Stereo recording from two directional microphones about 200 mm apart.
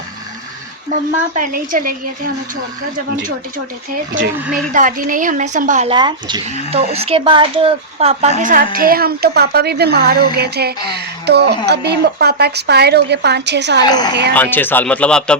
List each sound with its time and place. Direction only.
1.4 s a woman's voice: 45° right (ahead or behind)
4.7 s a woman's voice: 40° right (ahead or behind)
5.9 s speech: 20° right (ahead or behind)
8.4 s a woman's voice: 45° right (ahead or behind); by 13.8 s 60° right (ahead or behind)
13.8 s speech: 20° left (ahead or behind)
14.3 s speech: 10° left (ahead or behind)